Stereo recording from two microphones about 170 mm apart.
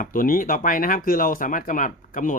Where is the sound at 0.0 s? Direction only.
55° left (ahead or behind).